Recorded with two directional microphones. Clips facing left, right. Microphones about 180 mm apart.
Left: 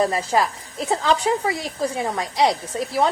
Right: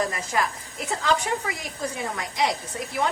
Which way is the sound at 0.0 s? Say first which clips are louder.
Left 6 dB; 30° left (ahead or behind).